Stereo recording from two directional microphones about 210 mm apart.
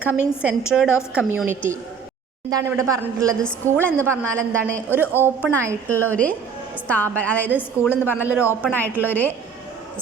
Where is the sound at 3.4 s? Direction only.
5° left (ahead or behind).